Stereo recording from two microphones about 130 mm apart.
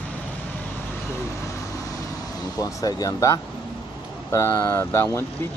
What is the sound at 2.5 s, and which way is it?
Speech, 25° left (ahead or behind).